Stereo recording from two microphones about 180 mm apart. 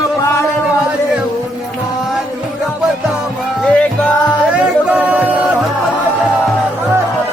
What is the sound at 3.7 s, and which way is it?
Music, 5° left (ahead or behind).